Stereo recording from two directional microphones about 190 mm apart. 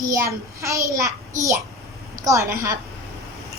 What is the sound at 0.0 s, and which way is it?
A child's voice, 15° right (ahead or behind).